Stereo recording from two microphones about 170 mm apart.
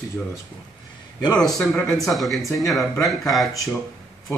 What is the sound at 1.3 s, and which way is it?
Speech, 5° left (ahead or behind).